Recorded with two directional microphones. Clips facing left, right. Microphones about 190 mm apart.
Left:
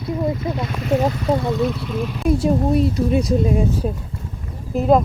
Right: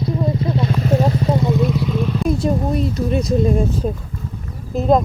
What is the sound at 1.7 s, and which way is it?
Speech, 5° left (ahead or behind).